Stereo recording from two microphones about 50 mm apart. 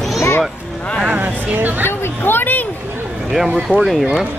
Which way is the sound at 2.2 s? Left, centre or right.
Left.